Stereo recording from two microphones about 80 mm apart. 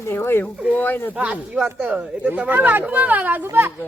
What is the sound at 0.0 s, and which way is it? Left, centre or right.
Speech, left.